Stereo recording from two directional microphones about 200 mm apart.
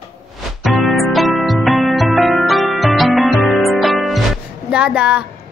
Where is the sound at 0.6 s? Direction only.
Centre (ahead or behind).